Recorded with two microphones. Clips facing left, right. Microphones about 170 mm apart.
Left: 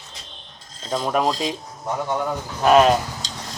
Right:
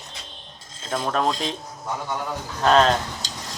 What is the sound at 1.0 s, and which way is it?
Speech, 15° left (ahead or behind).